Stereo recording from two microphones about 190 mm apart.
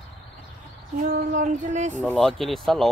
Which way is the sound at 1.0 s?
45° right (ahead or behind).